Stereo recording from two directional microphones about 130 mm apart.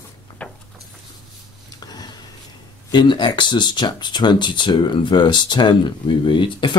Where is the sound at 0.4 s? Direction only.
10° left (ahead or behind).